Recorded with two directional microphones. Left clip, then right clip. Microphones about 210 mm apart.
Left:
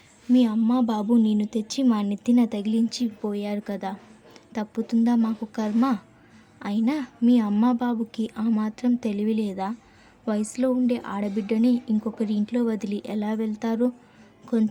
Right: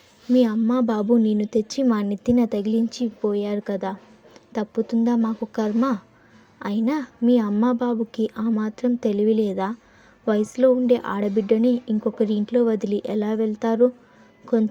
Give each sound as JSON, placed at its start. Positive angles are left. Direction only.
{"t": 0.3, "sound": "a woman's voice", "side_deg": -20}